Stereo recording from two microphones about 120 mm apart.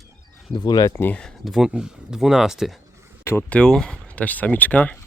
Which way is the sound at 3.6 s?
5° left (ahead or behind).